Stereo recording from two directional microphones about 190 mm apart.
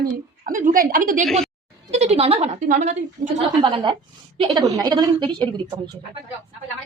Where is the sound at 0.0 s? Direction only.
45° right (ahead or behind).